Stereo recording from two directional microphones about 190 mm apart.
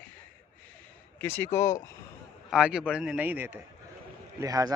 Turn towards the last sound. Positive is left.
turn(degrees=-20)  # may be behind; listen again after turning